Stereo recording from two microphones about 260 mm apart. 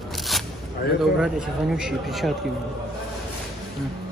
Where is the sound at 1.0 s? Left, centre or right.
Centre.